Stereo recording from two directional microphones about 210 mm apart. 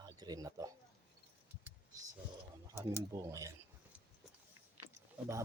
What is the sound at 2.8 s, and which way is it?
Speech, 15° right (ahead or behind).